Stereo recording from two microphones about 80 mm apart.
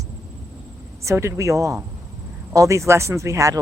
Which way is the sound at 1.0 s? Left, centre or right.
Right.